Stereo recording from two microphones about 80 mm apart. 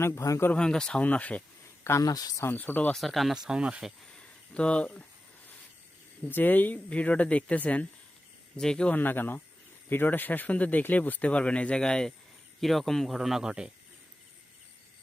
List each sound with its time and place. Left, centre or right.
0.0 s speech: left
0.5 s speech: centre
1.8 s speech: left
2.0 s speech: left
2.4 s speech: left
2.9 s speech: centre
4.5 s speech: centre
6.2 s speech: left
9.0 s speech: left; by 13.7 s centre